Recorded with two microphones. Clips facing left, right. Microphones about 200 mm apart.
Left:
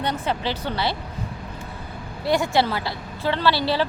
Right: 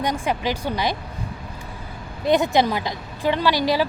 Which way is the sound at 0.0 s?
10° right (ahead or behind).